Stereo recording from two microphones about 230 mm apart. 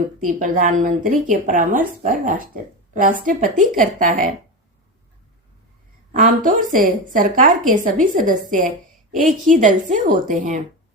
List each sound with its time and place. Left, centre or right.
0.2 s a woman's voice: right
6.1 s a woman's voice: right